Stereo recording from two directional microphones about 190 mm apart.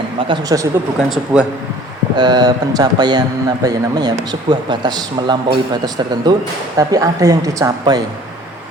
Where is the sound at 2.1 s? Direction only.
20° right (ahead or behind).